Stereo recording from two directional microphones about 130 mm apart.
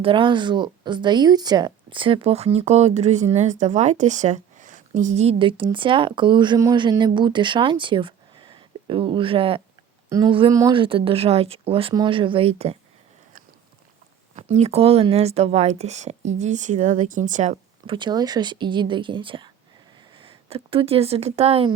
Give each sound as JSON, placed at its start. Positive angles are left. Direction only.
{"t": 0.0, "sound": "speech", "side_deg": -40}
{"t": 10.1, "sound": "speech", "side_deg": -30}
{"t": 10.7, "sound": "speech", "side_deg": -40}
{"t": 14.3, "sound": "speech", "side_deg": -55}
{"t": 17.8, "sound": "speech", "side_deg": -40}